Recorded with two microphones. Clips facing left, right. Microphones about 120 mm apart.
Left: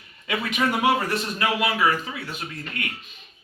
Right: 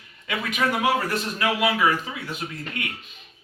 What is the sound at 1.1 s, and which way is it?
Speech, centre (ahead or behind).